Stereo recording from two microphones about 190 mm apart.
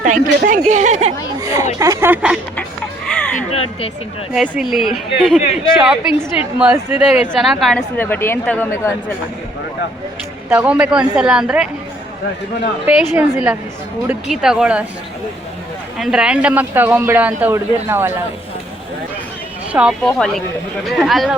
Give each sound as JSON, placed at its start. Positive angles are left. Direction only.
{"t": 0.0, "sound": "speech", "side_deg": -45}
{"t": 1.4, "sound": "a sound", "side_deg": -20}
{"t": 1.8, "sound": "a man's voice", "side_deg": -15}
{"t": 3.5, "sound": "speech", "side_deg": 30}
{"t": 4.4, "sound": "a woman's voice", "side_deg": 0}
{"t": 10.5, "sound": "a woman's voice", "side_deg": -5}
{"t": 12.8, "sound": "a man's voice", "side_deg": -10}
{"t": 16.0, "sound": "a man's voice", "side_deg": 0}
{"t": 19.7, "sound": "a man's voice", "side_deg": -5}